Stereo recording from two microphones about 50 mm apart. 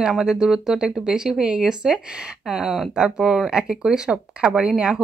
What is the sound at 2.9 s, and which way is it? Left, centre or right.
Speech, centre.